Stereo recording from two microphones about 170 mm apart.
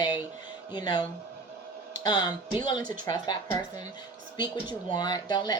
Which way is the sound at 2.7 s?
50° right (ahead or behind).